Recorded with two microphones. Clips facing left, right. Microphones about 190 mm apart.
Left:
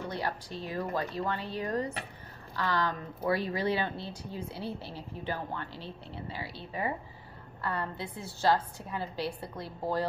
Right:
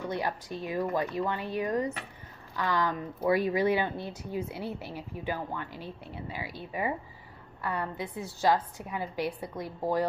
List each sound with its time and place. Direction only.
0.1 s speech: 15° right (ahead or behind)